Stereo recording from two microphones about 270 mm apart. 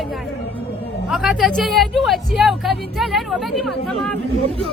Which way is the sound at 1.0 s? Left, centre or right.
Centre.